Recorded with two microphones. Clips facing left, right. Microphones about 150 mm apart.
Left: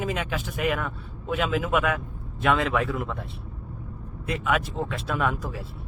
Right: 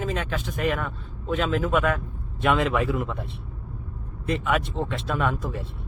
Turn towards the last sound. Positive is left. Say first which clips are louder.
# right 1 dB
turn(degrees=0)  # may be behind; listen again after turning